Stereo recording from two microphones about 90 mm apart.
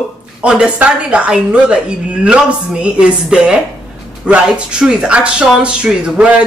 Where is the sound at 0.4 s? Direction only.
10° right (ahead or behind).